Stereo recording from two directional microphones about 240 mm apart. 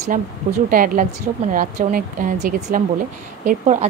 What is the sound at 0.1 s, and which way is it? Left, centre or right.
A woman's voice, right.